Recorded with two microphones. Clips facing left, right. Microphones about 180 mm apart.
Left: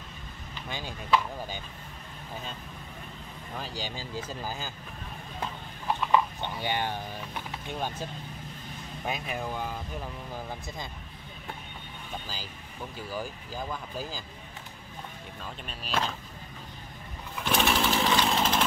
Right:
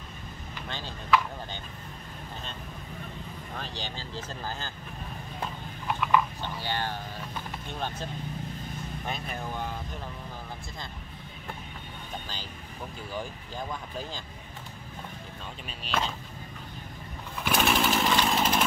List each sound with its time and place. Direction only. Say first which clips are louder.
0.7 s speech: left 2 dB; 10° left (ahead or behind)
3.5 s speech: left 2 dB; 10° left (ahead or behind)
5.9 s a sound: even; 20° left (ahead or behind)
9.0 s speech: left 4 dB; 10° left (ahead or behind)
13.1 s speech: even; 5° left (ahead or behind)
15.8 s speech: even; centre (ahead or behind)
17.5 s chainsaw: right 1 dB; 5° right (ahead or behind)